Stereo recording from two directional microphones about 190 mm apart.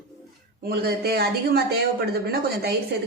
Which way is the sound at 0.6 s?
55° right (ahead or behind).